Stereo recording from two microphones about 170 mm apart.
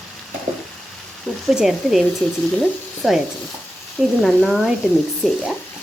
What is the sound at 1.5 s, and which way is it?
Speech, centre (ahead or behind).